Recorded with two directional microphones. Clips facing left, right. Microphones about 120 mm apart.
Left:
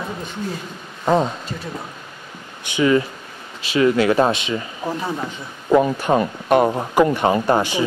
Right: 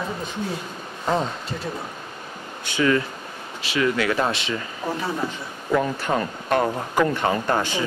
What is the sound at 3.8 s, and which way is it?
Speech, 30° left (ahead or behind).